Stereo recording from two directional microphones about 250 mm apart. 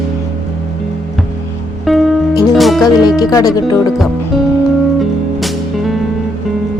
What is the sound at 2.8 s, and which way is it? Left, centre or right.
Speech, centre.